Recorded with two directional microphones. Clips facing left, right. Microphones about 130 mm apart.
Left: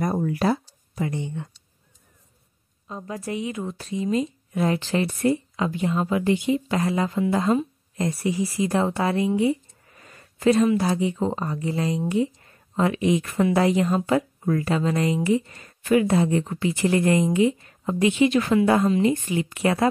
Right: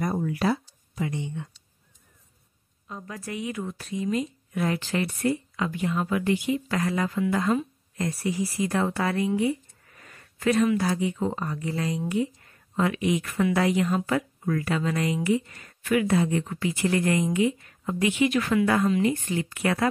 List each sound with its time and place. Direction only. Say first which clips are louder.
0.0 s speech: left 3 dB; 40° left (ahead or behind)
2.9 s speech: left 5 dB; 25° left (ahead or behind)